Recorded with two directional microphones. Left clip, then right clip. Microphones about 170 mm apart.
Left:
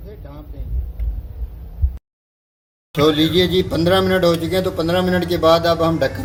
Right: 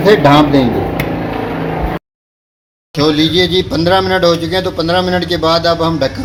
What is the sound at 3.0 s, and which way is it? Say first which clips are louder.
Speech: right 4 dB; 35° right (ahead or behind).